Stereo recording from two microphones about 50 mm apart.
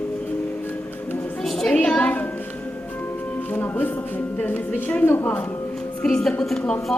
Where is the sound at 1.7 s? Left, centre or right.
Left.